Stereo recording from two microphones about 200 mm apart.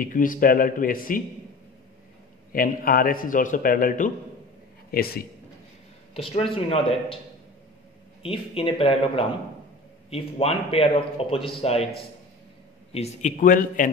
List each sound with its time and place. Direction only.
0.0 s a man's voice: 45° left (ahead or behind)
2.5 s a man's voice: 45° left (ahead or behind)
6.1 s a man's voice: 30° left (ahead or behind)
8.2 s a man's voice: 25° left (ahead or behind)
12.9 s speech: 35° left (ahead or behind)